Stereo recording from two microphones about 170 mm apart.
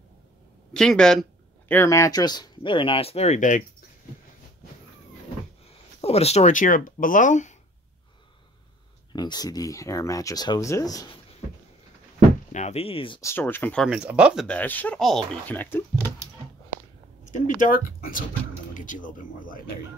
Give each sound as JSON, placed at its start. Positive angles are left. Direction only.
{"t": 0.7, "sound": "speech", "side_deg": 5}
{"t": 1.7, "sound": "speech", "side_deg": 15}
{"t": 5.9, "sound": "speech", "side_deg": 35}
{"t": 9.1, "sound": "speech", "side_deg": 25}
{"t": 12.5, "sound": "speech", "side_deg": 40}
{"t": 13.2, "sound": "speech", "side_deg": 15}
{"t": 13.8, "sound": "speech", "side_deg": -5}
{"t": 14.5, "sound": "speech", "side_deg": 10}
{"t": 17.6, "sound": "speech", "side_deg": 55}
{"t": 18.7, "sound": "a sound", "side_deg": 50}